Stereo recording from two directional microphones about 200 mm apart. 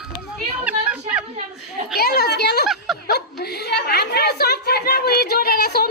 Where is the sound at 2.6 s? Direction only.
Centre (ahead or behind).